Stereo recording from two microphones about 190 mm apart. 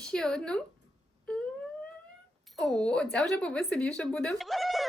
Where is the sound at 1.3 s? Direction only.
5° left (ahead or behind).